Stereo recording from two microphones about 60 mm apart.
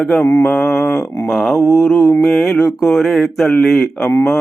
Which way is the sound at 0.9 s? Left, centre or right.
Left.